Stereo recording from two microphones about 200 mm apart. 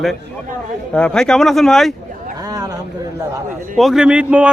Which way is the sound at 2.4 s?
20° right (ahead or behind).